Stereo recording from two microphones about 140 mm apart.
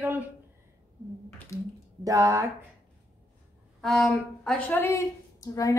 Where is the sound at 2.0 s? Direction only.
25° right (ahead or behind).